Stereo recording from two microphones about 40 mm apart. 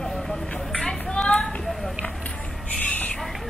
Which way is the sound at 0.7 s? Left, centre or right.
Centre.